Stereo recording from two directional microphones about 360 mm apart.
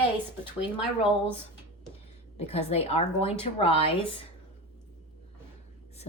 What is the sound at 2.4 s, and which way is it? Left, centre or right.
Speech, centre.